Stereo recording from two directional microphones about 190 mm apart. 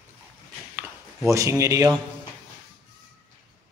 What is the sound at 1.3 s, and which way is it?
Speech, 15° right (ahead or behind).